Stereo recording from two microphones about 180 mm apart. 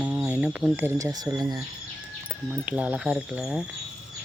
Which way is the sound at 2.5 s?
5° right (ahead or behind).